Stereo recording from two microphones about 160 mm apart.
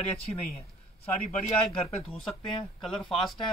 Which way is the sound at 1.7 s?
35° left (ahead or behind).